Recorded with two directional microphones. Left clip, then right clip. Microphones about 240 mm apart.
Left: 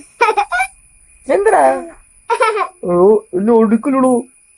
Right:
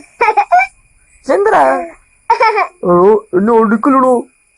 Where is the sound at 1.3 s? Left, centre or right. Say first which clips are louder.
Right 1 dB; centre.